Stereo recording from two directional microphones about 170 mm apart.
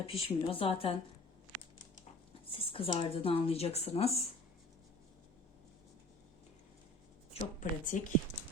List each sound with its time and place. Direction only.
0.0 s a woman's voice: 35° left (ahead or behind)
2.5 s a woman's voice: 35° left (ahead or behind)
7.6 s a woman's voice: 50° left (ahead or behind)